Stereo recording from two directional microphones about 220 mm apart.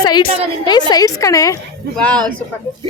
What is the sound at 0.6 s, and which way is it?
Snicker, 20° left (ahead or behind).